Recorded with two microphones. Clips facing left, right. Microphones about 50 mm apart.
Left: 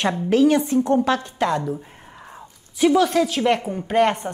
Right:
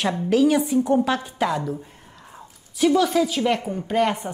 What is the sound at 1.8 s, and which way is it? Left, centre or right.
Speech, left.